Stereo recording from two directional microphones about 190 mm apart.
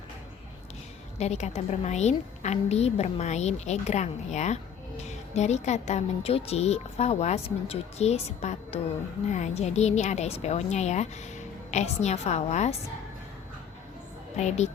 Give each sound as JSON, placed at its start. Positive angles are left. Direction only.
{"t": 1.2, "sound": "a woman's voice", "side_deg": 35}
{"t": 14.3, "sound": "a woman's voice", "side_deg": 35}